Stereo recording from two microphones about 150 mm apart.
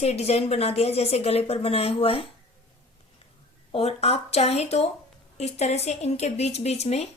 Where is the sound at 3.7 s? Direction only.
40° left (ahead or behind).